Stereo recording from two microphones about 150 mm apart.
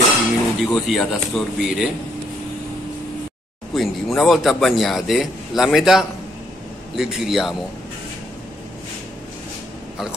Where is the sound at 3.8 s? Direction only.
Centre (ahead or behind).